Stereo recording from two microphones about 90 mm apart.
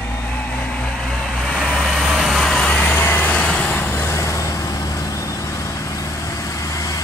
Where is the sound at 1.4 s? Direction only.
5° left (ahead or behind).